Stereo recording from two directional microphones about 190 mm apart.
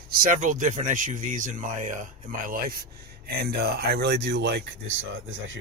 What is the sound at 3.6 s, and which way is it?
Speech, 60° right (ahead or behind).